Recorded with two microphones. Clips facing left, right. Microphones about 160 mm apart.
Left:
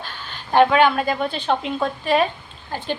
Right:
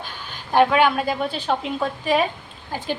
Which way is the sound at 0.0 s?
10° right (ahead or behind).